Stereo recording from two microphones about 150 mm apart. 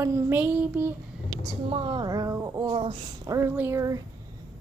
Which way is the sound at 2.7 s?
35° right (ahead or behind).